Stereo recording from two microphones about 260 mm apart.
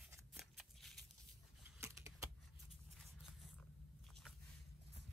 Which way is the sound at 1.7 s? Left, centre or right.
Centre.